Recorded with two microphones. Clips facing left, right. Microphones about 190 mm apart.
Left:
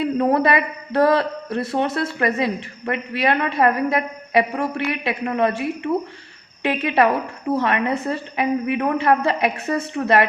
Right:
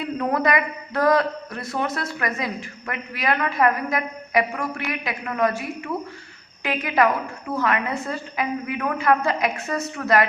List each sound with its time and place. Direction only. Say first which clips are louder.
0.0 s a man's voice: left 5 dB; 30° left (ahead or behind)